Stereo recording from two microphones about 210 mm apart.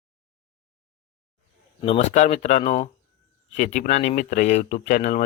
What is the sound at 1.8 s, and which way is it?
Speech, 30° left (ahead or behind).